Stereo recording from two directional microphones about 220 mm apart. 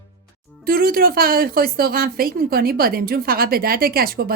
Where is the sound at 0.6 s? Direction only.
40° right (ahead or behind).